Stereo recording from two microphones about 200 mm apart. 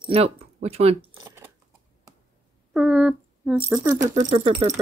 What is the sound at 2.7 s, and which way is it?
Speech, 5° right (ahead or behind).